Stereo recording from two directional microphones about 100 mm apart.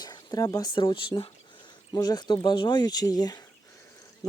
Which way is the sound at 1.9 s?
40° left (ahead or behind).